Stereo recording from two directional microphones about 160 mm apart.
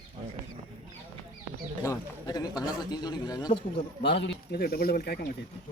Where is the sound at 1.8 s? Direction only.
20° left (ahead or behind).